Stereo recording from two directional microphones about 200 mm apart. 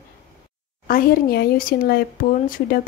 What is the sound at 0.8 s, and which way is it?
Speech, 45° left (ahead or behind).